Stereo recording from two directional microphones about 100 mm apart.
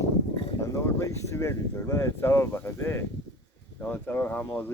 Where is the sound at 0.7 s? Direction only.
30° left (ahead or behind).